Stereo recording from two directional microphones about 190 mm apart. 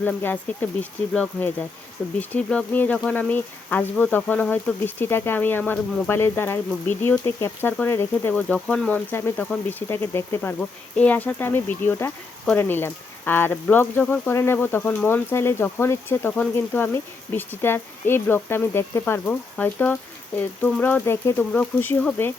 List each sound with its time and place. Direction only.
0.0 s speech: 10° left (ahead or behind)